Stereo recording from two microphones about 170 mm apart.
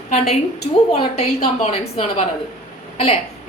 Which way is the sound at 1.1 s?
40° left (ahead or behind).